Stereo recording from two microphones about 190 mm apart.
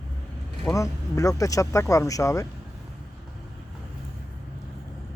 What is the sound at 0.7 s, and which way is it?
Speech, 15° left (ahead or behind).